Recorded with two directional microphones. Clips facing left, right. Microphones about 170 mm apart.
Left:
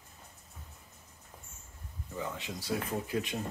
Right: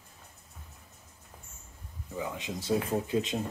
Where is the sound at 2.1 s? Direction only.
15° right (ahead or behind).